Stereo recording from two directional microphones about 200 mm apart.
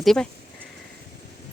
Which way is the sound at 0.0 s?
Centre (ahead or behind).